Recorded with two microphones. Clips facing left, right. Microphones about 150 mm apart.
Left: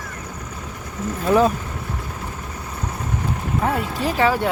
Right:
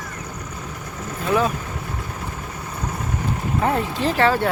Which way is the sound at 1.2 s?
35° left (ahead or behind).